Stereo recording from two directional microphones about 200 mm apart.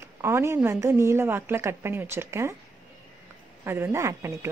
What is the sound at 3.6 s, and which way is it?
Speech, 10° right (ahead or behind).